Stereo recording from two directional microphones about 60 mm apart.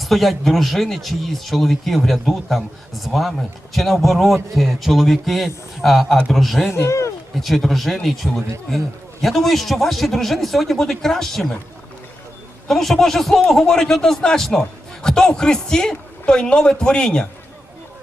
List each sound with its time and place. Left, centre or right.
0.0 s speech: centre
6.7 s speech: left
7.4 s speech: centre
12.6 s speech: centre